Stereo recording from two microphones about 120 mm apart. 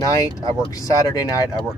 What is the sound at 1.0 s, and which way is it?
Speech, 30° left (ahead or behind).